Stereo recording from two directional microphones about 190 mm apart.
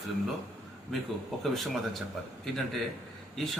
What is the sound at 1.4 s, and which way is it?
Speech, centre (ahead or behind).